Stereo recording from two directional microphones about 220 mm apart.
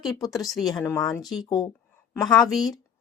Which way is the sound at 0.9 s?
Centre (ahead or behind).